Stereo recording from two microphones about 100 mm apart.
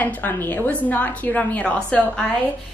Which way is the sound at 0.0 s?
20° left (ahead or behind).